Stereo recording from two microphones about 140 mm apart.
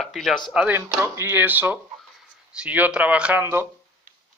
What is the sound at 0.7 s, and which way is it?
A man's voice, 20° right (ahead or behind).